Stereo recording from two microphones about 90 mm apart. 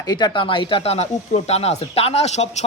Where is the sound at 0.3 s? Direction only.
70° left (ahead or behind).